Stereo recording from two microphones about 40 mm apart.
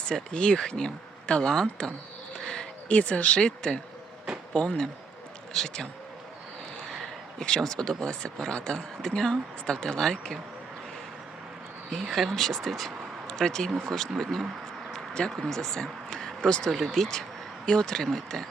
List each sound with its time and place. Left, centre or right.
0.0 s speech: left
2.3 s a sound: centre
2.9 s speech: left
6.8 s a sound: centre
7.4 s speech: centre
12.0 s speech: centre
12.3 s speech: centre
14.9 s a sound: centre
15.4 s speech: centre
16.7 s speech: centre
17.7 s speech: centre